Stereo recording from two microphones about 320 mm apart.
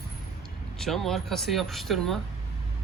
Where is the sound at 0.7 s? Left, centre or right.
Centre.